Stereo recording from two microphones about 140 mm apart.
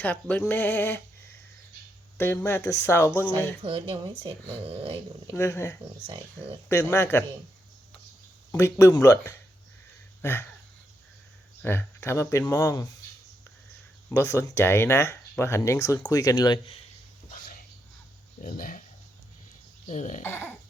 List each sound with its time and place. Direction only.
0.0 s speech: 15° left (ahead or behind)
3.6 s speech: 40° right (ahead or behind)
5.3 s speech: 20° left (ahead or behind)
8.5 s speech: 20° left (ahead or behind)
10.2 s a sound: 15° left (ahead or behind)
11.6 s speech: 15° left (ahead or behind)
14.1 s speech: 20° left (ahead or behind)
17.3 s a sound: 90° left
18.4 s speech: 85° left
19.9 s speech: 60° left (ahead or behind)
20.2 s speech: 15° left (ahead or behind)